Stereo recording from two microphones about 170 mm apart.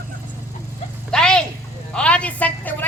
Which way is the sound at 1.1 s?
5° left (ahead or behind).